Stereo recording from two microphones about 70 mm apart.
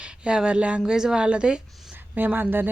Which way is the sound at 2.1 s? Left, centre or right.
Right.